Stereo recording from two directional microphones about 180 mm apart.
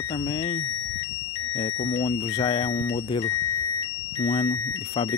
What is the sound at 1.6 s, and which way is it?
Speech, 30° left (ahead or behind).